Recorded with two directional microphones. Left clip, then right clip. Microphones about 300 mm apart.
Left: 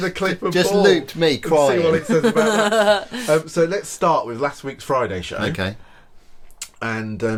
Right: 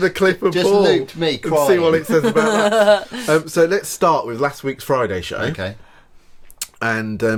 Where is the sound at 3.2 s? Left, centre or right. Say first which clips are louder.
Right 2 dB; right.